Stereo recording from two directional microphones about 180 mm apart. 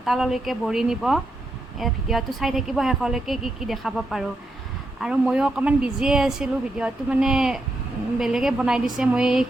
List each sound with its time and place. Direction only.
0.0 s a woman's voice: centre (ahead or behind)